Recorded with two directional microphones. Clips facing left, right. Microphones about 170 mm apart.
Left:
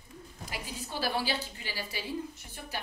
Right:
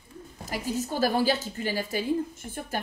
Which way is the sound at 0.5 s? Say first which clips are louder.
Right 10 dB; 45° right (ahead or behind).